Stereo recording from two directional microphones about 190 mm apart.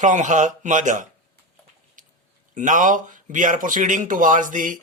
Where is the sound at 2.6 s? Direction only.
45° right (ahead or behind).